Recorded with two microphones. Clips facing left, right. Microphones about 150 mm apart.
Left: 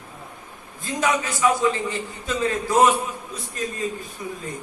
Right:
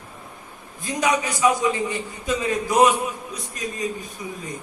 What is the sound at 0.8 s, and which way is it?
A man's voice, 15° right (ahead or behind).